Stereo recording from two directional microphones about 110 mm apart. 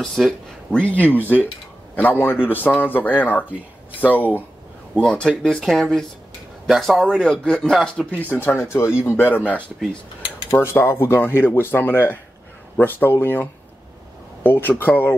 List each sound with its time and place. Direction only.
0.0 s speech: 5° left (ahead or behind)
8.2 s speech: 20° left (ahead or behind)